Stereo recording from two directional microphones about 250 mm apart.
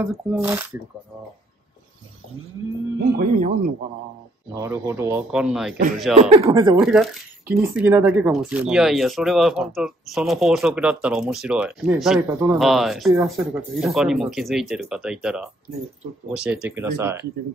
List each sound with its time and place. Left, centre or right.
0.0 s speech: centre
3.2 s speech: right
4.6 s speech: centre
6.3 s speech: centre
6.8 s speech: centre
12.5 s speech: centre